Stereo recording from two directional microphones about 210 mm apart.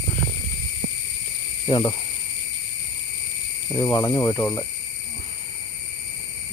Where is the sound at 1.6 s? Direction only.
20° left (ahead or behind).